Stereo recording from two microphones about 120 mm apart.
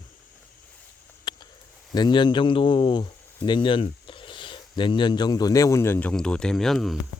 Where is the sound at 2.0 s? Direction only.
40° left (ahead or behind).